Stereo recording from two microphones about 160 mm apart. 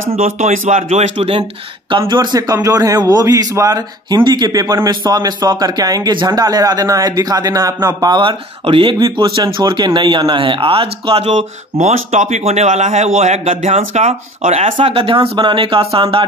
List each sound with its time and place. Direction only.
0.2 s speech: 50° right (ahead or behind)
1.9 s a man's voice: 30° right (ahead or behind)